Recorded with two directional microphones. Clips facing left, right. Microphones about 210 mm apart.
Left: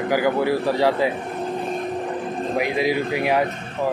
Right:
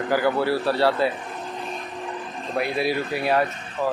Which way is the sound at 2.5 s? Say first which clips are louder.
Left 2 dB; 15° left (ahead or behind).